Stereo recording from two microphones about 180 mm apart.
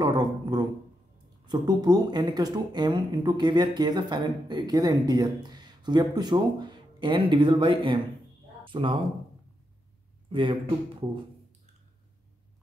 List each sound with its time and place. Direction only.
0.0 s speech: 20° right (ahead or behind)
10.3 s speech: 30° right (ahead or behind)